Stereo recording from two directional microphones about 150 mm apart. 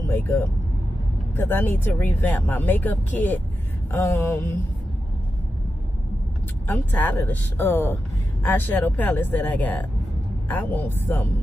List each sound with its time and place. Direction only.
0.0 s speech: 15° left (ahead or behind)
6.7 s speech: 10° left (ahead or behind)